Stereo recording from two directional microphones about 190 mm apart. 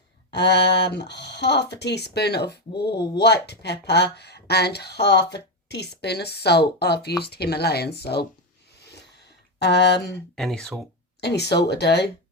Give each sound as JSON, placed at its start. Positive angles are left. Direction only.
{"t": 0.3, "sound": "speech", "side_deg": 60}
{"t": 8.8, "sound": "a sound", "side_deg": 60}
{"t": 9.6, "sound": "speech", "side_deg": 60}
{"t": 10.3, "sound": "speech", "side_deg": 5}
{"t": 11.2, "sound": "speech", "side_deg": 60}